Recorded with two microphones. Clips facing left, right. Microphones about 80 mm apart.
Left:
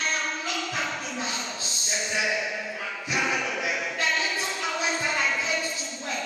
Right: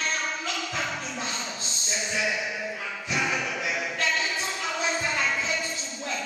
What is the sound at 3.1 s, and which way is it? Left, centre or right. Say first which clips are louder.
Choir: left 1 dB; centre.